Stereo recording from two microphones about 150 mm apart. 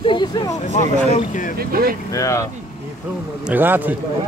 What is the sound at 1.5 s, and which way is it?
Speech, 80° right.